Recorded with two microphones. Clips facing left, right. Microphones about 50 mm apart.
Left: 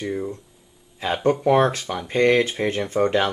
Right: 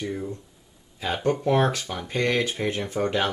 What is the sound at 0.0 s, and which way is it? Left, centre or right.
Speech, centre.